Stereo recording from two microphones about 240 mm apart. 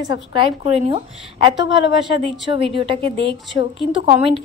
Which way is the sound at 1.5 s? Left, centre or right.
Left.